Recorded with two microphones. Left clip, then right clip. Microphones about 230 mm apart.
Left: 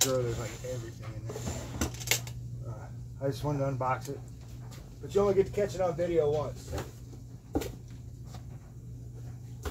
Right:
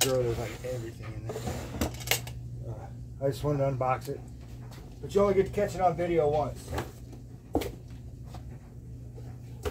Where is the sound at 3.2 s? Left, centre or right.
Centre.